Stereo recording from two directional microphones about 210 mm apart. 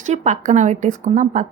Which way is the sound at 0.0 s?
35° right (ahead or behind).